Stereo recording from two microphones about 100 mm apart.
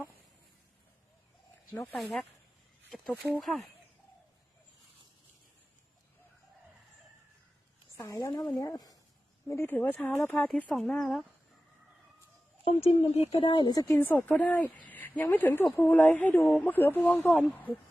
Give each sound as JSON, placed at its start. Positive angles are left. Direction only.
{"t": 2.0, "sound": "speech", "side_deg": 0}
{"t": 3.4, "sound": "speech", "side_deg": 0}
{"t": 7.9, "sound": "a woman's voice", "side_deg": 30}
{"t": 9.5, "sound": "speech", "side_deg": 20}
{"t": 12.6, "sound": "speech", "side_deg": 80}
{"t": 13.3, "sound": "speech", "side_deg": 60}
{"t": 14.0, "sound": "a woman's voice", "side_deg": 20}